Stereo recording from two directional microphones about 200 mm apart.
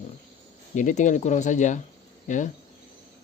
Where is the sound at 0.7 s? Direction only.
40° left (ahead or behind).